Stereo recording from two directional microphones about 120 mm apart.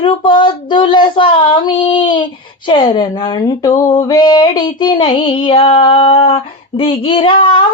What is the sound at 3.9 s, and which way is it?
Female singing, 30° left (ahead or behind).